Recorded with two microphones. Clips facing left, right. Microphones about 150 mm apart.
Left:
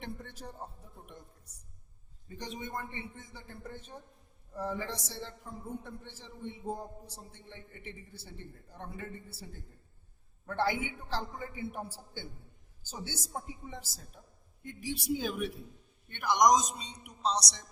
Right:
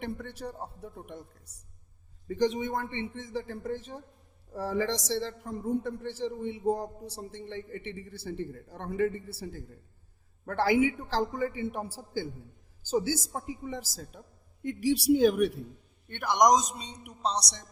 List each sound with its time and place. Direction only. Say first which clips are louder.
0.0 s a man's voice: right 7 dB; 65° right (ahead or behind)
2.2 s a woman's voice: right 14 dB; 90° right; by 17.6 s 60° right (ahead or behind)